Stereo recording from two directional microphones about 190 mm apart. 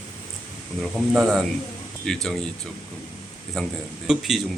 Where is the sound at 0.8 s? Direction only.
Centre (ahead or behind).